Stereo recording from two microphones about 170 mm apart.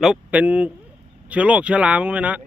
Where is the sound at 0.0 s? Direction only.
5° right (ahead or behind).